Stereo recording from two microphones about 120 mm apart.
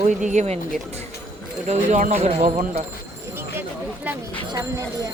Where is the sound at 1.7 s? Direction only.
80° right.